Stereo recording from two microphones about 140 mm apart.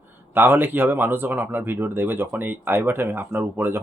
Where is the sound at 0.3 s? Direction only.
15° right (ahead or behind).